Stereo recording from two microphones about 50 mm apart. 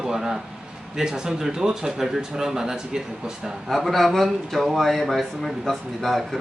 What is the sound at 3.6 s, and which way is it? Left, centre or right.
A man's voice, centre.